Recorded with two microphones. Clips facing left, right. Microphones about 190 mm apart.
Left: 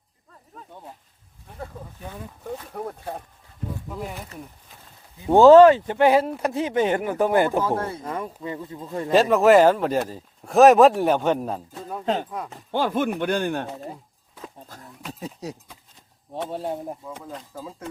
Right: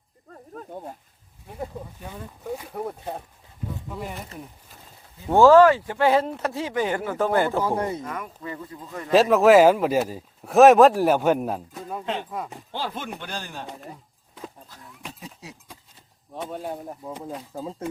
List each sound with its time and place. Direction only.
0.5 s speech: 45° right (ahead or behind)
1.5 s speech: 15° right (ahead or behind)
5.2 s speech: 20° left (ahead or behind)
7.6 s speech: 15° right (ahead or behind)
8.0 s a man's voice: 30° left (ahead or behind)
9.1 s speech: centre (ahead or behind)
12.0 s speech: 40° left (ahead or behind)
12.7 s chopping: 50° left (ahead or behind)
13.1 s speech: 60° left (ahead or behind)
14.7 s a sound: 40° left (ahead or behind)
16.5 s a man's voice: 30° left (ahead or behind)
17.0 s speech: 15° right (ahead or behind)
17.6 s speech: 25° right (ahead or behind)